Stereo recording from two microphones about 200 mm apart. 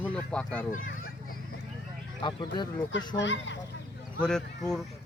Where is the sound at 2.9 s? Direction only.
65° left (ahead or behind).